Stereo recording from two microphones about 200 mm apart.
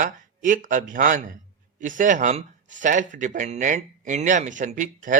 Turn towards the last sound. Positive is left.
turn(degrees=-40)  # may be behind; listen again after turning